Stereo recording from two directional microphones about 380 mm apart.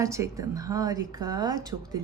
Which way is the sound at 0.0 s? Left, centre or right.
Centre.